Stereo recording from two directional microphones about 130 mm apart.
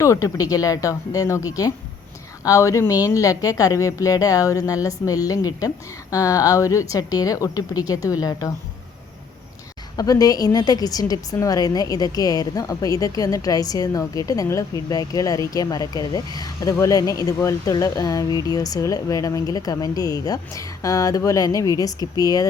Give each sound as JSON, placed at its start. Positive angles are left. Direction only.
{"t": 0.0, "sound": "a woman's voice", "side_deg": 25}
{"t": 10.0, "sound": "a woman's voice", "side_deg": 30}